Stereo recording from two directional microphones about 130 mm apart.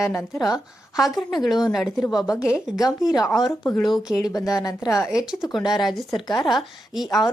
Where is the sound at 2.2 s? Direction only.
25° left (ahead or behind).